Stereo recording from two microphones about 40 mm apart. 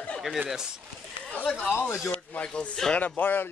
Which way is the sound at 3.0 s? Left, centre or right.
Left.